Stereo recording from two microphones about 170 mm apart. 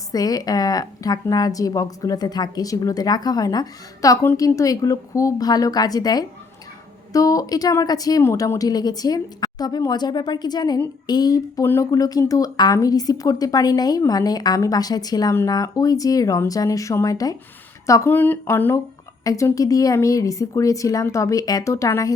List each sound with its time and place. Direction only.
0.1 s speech: 20° left (ahead or behind)